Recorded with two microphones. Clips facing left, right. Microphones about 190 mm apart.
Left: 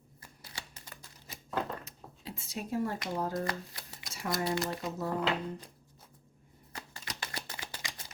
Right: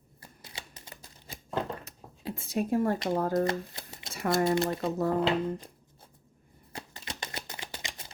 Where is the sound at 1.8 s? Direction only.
55° right (ahead or behind).